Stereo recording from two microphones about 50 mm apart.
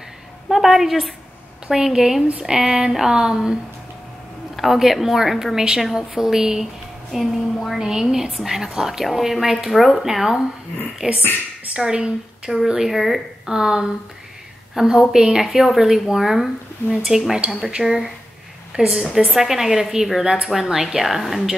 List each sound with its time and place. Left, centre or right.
0.5 s a woman's voice: centre
4.6 s a woman's voice: centre
11.0 s a woman's voice: centre
13.5 s a woman's voice: centre